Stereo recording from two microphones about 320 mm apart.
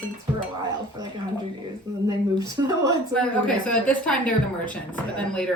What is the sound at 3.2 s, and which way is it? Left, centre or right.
A woman's voice, centre.